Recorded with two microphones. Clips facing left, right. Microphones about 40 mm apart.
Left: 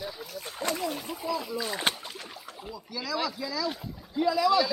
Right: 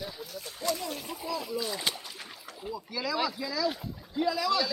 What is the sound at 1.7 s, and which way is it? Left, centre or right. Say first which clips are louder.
Speech: left 3 dB; left.